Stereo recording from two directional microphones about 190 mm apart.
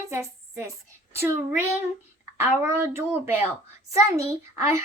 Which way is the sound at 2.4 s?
15° right (ahead or behind).